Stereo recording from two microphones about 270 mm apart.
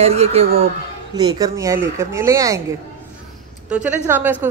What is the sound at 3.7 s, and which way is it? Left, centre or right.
Speech, centre.